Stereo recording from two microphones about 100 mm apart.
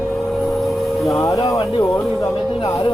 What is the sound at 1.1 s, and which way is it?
Speech, 30° left (ahead or behind).